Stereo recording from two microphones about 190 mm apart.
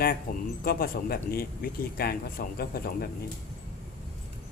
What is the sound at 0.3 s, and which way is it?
Speech, 50° left (ahead or behind).